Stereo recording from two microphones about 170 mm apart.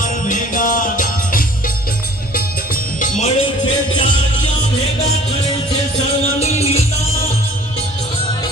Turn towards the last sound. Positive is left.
turn(degrees=40)  # may be behind; listen again after turning